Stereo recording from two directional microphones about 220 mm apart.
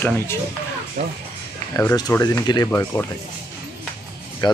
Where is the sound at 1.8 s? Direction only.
15° left (ahead or behind).